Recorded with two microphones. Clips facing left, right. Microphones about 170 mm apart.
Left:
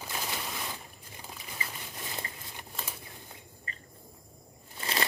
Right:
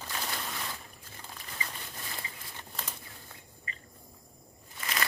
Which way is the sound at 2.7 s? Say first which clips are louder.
Left 1 dB; 5° left (ahead or behind).